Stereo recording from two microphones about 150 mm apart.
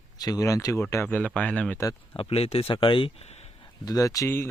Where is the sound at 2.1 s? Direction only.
40° left (ahead or behind).